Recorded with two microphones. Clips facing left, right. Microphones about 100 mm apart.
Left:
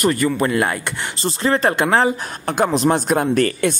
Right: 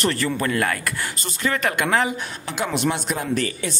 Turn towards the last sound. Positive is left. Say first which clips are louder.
# left 7 dB
turn(degrees=50)  # may be behind; listen again after turning